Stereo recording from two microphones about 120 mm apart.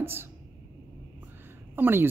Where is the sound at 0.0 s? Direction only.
20° right (ahead or behind).